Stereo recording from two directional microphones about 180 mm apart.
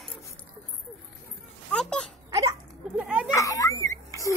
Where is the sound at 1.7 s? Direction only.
5° left (ahead or behind).